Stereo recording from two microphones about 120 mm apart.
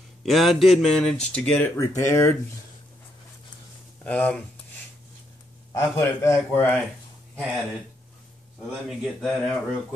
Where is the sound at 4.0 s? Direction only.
10° left (ahead or behind).